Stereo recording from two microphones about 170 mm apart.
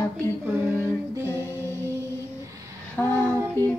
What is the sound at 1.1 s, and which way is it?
Music, 15° right (ahead or behind).